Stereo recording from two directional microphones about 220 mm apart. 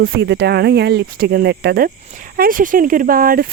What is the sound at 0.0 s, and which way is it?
Speech, 50° right (ahead or behind).